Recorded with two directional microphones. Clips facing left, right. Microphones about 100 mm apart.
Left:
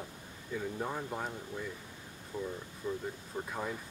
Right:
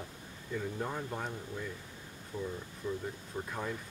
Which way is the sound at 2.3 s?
15° left (ahead or behind).